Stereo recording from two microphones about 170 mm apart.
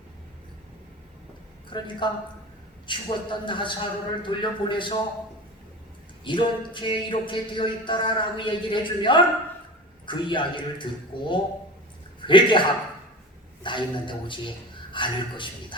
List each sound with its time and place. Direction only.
1.7 s speech: 30° left (ahead or behind)
6.2 s a man's voice: 30° left (ahead or behind)